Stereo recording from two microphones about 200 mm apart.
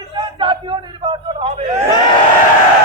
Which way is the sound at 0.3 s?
25° right (ahead or behind).